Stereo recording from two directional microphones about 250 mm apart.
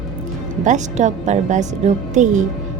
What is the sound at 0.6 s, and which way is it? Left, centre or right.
A woman's voice, right.